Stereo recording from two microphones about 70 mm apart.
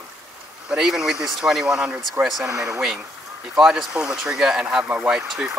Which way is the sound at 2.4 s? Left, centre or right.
Right.